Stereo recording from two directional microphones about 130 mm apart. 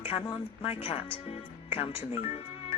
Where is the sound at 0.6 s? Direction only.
50° left (ahead or behind).